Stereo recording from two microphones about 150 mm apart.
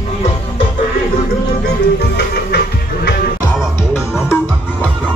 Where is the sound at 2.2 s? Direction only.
90° left.